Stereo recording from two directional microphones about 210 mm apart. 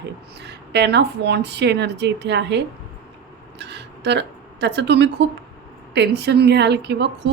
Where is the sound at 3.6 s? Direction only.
55° right (ahead or behind).